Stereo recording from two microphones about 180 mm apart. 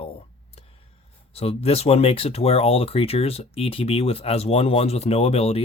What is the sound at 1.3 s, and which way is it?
Speech, 35° left (ahead or behind).